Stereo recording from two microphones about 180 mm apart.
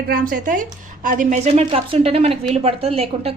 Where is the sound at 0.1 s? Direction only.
50° right (ahead or behind).